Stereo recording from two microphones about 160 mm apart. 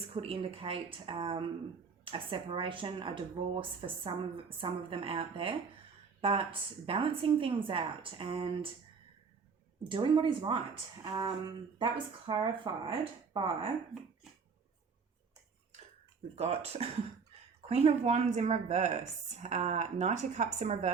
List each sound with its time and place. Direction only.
0.1 s speech: 35° right (ahead or behind)
9.9 s speech: 30° right (ahead or behind)
16.3 s speech: 40° right (ahead or behind)